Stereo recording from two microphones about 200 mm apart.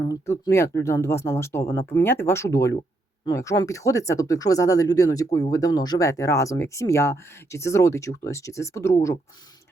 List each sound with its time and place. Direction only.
0.0 s speech: 20° left (ahead or behind)